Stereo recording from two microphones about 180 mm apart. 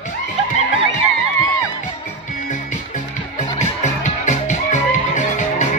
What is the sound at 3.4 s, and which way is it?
Music, 40° left (ahead or behind).